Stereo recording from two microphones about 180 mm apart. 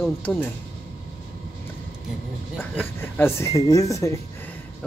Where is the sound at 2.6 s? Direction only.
10° left (ahead or behind).